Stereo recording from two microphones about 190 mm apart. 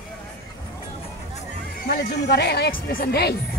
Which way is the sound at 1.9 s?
60° left (ahead or behind).